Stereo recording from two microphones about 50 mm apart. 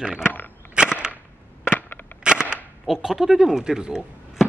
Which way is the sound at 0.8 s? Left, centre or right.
Centre.